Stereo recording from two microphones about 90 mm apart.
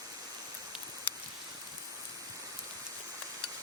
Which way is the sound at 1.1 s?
20° left (ahead or behind).